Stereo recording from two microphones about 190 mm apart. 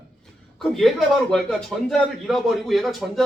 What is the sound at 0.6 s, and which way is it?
A man's voice, centre (ahead or behind).